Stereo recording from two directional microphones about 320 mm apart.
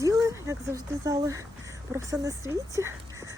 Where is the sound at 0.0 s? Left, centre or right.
Centre.